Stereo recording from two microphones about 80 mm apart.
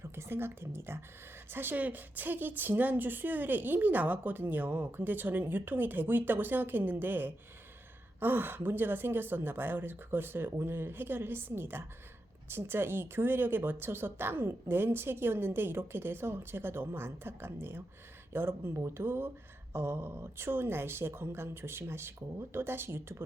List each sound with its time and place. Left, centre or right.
0.0 s a woman's voice: right